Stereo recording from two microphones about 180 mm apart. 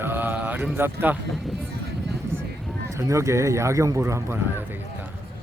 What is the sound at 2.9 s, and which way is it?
Speech, 15° right (ahead or behind).